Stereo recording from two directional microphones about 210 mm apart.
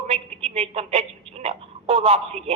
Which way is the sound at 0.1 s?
30° right (ahead or behind).